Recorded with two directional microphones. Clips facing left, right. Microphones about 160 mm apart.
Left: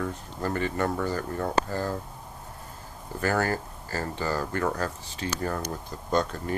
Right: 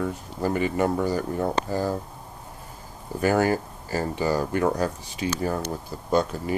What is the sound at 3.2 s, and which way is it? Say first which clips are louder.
Speech: right 5 dB; 15° right (ahead or behind).